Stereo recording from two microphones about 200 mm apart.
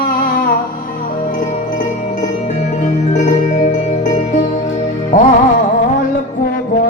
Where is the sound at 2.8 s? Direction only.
35° left (ahead or behind).